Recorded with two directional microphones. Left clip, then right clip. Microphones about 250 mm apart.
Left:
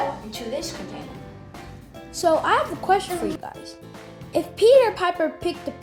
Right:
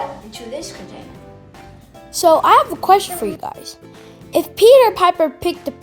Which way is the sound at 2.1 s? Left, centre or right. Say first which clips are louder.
Right 9 dB; right.